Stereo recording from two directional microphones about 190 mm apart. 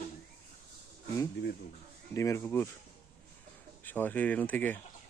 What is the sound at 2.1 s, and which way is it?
Speech, 15° left (ahead or behind).